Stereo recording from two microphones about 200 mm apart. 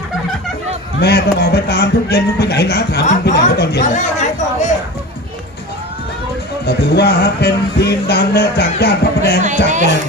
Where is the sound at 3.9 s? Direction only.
35° left (ahead or behind).